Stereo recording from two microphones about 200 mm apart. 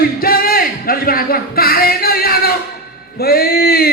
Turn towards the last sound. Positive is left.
turn(degrees=50)  # may be behind; listen again after turning